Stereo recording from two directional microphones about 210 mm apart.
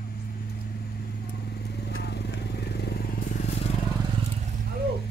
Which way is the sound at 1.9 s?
55° left (ahead or behind).